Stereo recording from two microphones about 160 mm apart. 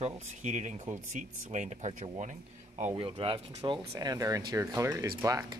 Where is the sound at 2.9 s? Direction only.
35° right (ahead or behind).